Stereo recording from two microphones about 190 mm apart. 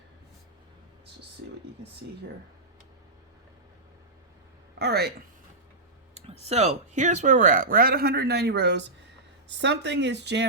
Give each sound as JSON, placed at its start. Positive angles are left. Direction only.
{"t": 4.8, "sound": "speech", "side_deg": -60}
{"t": 6.1, "sound": "speech", "side_deg": -35}